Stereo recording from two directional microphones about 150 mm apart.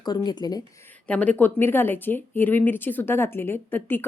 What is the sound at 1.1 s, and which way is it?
A woman's voice, 10° left (ahead or behind).